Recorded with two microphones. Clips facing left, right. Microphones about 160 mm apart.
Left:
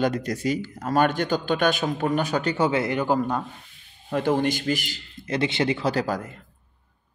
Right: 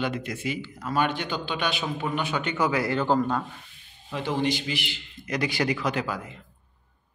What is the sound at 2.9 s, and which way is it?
Speech, 10° left (ahead or behind).